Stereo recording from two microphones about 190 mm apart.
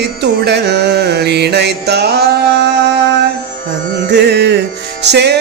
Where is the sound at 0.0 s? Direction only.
60° right (ahead or behind).